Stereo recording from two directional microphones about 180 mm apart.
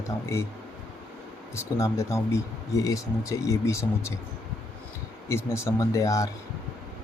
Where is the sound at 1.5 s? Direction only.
15° left (ahead or behind).